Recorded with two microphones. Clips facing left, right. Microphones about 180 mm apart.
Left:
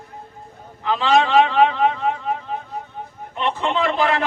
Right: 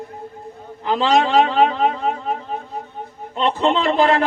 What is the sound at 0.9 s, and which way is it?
Speech, 40° right (ahead or behind).